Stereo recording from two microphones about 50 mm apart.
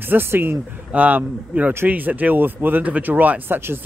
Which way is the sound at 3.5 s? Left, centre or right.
Right.